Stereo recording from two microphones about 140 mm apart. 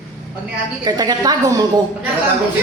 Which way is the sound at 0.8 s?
30° right (ahead or behind).